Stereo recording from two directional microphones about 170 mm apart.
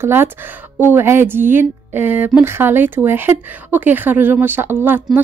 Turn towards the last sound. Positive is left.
turn(degrees=-10)  # may be behind; listen again after turning